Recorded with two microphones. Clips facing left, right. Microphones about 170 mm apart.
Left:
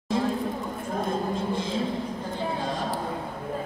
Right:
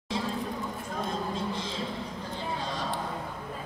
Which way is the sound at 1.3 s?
50° left (ahead or behind).